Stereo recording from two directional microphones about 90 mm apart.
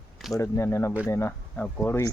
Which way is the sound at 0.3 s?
35° left (ahead or behind).